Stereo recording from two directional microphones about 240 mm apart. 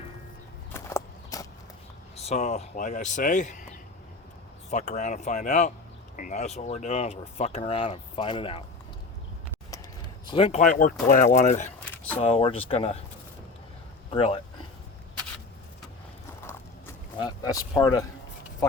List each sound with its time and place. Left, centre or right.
0.7 s walk: centre
2.1 s speech: left
4.7 s speech: left
10.2 s speech: left
14.1 s speech: left
16.5 s a sound: centre